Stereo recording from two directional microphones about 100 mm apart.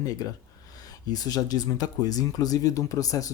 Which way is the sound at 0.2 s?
35° left (ahead or behind).